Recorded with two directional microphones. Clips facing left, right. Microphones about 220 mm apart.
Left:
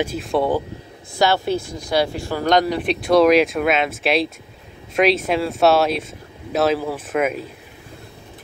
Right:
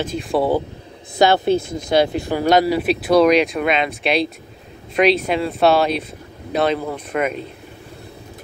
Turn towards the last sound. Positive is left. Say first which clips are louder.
# left 1 dB
turn(degrees=5)  # may be behind; listen again after turning